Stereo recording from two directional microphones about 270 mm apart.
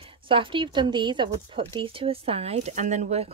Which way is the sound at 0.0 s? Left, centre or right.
Centre.